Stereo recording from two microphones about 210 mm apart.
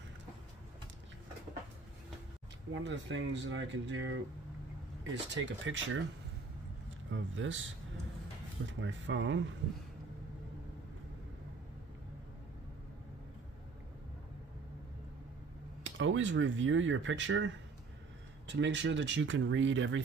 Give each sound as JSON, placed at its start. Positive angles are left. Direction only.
{"t": 2.7, "sound": "speech", "side_deg": -60}
{"t": 7.1, "sound": "speech", "side_deg": -65}
{"t": 8.6, "sound": "speech", "side_deg": -60}
{"t": 15.8, "sound": "speech", "side_deg": -60}